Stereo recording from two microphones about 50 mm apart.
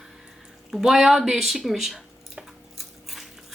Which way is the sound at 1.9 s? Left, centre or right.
Centre.